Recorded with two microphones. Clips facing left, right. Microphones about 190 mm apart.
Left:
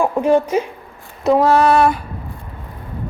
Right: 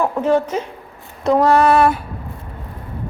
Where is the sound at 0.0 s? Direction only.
15° left (ahead or behind).